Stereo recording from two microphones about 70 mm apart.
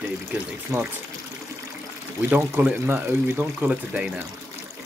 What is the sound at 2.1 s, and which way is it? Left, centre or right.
Speech, right.